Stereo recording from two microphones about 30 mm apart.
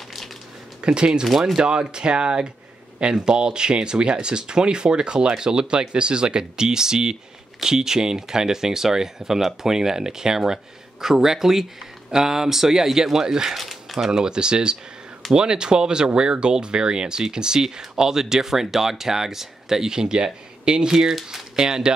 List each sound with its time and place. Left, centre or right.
0.7 s speech: right
13.6 s a sound: centre
14.1 s speech: right
20.9 s speech: centre
21.5 s speech: right